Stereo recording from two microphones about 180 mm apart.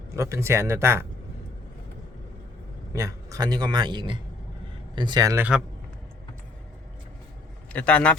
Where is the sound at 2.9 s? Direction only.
15° right (ahead or behind).